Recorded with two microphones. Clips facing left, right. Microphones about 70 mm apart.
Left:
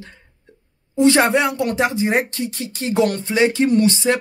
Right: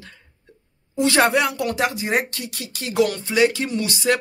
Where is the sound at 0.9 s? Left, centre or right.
Left.